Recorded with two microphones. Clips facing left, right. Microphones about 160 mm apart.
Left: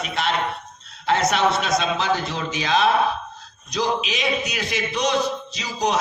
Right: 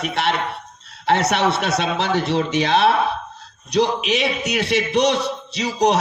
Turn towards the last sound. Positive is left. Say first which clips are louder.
# right 5 dB
turn(degrees=-70)  # may be behind; listen again after turning